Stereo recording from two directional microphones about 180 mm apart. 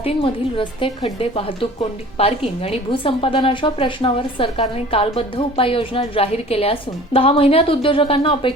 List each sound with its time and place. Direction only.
0.0 s a woman's voice: 30° left (ahead or behind)